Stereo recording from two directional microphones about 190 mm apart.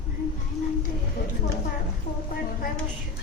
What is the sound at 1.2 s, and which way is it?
Speech, 55° left (ahead or behind).